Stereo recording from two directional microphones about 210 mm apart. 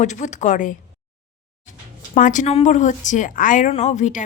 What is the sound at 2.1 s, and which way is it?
Speech, 35° left (ahead or behind).